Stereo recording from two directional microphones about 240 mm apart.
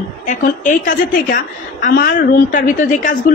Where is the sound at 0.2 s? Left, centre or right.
Left.